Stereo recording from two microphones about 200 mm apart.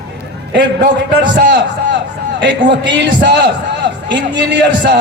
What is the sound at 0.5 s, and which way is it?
A man's voice, 60° right (ahead or behind).